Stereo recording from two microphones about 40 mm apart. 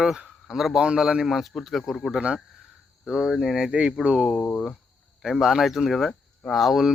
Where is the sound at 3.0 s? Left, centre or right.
Centre.